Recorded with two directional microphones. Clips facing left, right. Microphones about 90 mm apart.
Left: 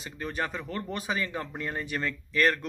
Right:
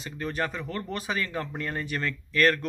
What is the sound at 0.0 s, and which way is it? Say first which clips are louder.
Speech: right 2 dB; 20° left (ahead or behind).